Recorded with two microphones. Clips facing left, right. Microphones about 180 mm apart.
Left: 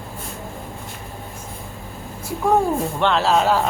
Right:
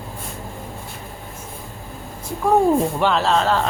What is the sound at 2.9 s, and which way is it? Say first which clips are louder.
Speech: even; 5° right (ahead or behind).